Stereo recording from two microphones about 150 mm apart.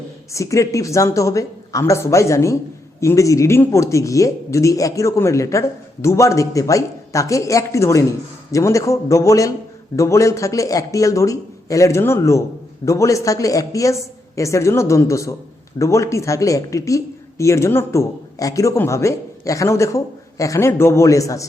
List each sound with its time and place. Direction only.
0.3 s speech: 20° left (ahead or behind)